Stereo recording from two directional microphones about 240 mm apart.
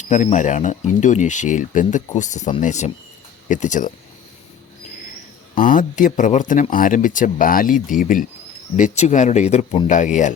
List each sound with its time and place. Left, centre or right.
0.0 s speech: left
5.5 s speech: left